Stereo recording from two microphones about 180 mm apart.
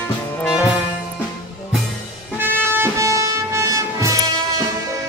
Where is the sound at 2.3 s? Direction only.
10° right (ahead or behind).